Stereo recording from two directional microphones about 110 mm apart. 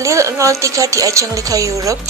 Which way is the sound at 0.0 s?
30° right (ahead or behind).